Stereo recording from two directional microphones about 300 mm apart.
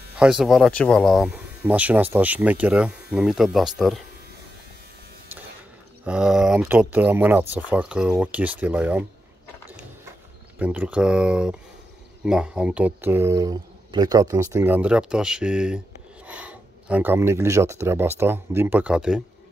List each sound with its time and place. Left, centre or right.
0.2 s speech: centre
6.0 s speech: centre
10.6 s speech: centre